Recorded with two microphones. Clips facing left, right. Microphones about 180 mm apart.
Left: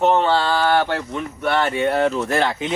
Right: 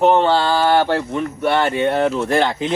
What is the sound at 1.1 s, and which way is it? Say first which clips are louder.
Speech: right 1 dB; centre (ahead or behind).